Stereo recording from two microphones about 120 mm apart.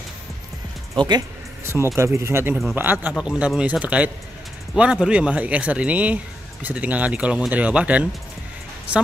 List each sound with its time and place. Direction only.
0.9 s speech: 35° right (ahead or behind)
1.6 s speech: 20° right (ahead or behind)